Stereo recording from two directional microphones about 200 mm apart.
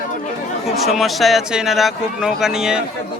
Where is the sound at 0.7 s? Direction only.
Centre (ahead or behind).